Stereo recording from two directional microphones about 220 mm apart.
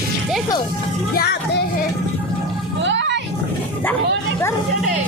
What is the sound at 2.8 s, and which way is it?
Music, 55° right (ahead or behind).